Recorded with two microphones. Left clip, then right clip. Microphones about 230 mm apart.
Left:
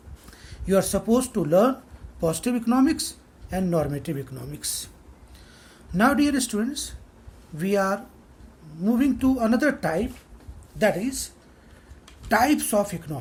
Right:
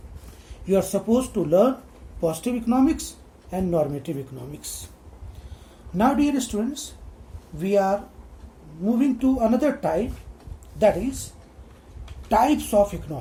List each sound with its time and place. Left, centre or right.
0.7 s a woman's voice: left
6.0 s a woman's voice: left
12.3 s a woman's voice: left